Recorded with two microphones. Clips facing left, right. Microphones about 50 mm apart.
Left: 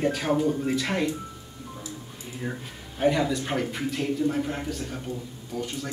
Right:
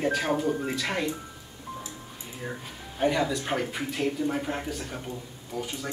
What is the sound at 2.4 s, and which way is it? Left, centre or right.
Speech, centre.